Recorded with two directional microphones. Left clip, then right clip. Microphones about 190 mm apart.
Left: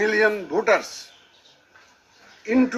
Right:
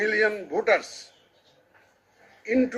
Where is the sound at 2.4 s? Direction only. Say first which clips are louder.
Left 3 dB; 30° left (ahead or behind).